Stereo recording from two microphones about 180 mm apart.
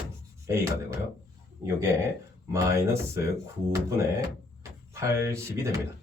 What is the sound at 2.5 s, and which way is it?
Speech, 15° right (ahead or behind).